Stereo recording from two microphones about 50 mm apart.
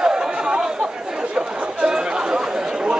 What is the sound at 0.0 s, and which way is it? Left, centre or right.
Chatter, centre.